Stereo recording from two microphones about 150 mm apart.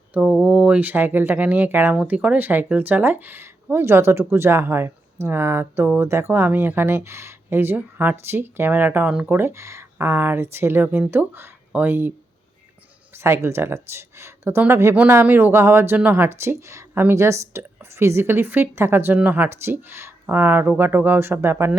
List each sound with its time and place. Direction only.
0.1 s speech: 5° right (ahead or behind)
13.1 s speech: 20° right (ahead or behind)